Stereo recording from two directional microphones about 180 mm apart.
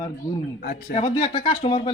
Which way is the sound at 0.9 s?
30° left (ahead or behind).